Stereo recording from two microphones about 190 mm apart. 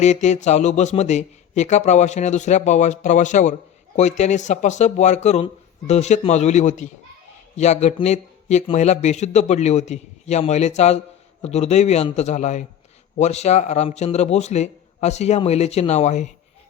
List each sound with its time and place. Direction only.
0.0 s a man's voice: 40° left (ahead or behind)